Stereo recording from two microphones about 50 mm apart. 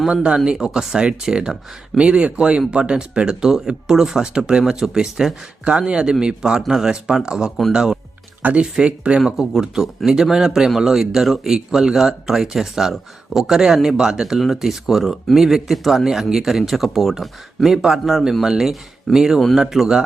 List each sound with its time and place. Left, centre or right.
0.1 s speech: centre
8.4 s speech: right
8.6 s speech: centre
9.2 s speech: centre